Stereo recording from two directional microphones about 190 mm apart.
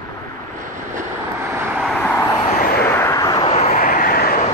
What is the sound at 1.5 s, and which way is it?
Vehicle, 10° right (ahead or behind).